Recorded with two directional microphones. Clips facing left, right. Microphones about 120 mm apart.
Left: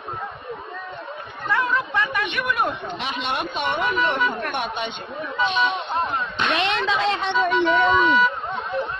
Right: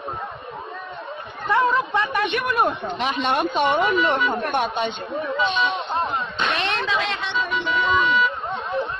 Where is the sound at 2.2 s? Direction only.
40° right (ahead or behind).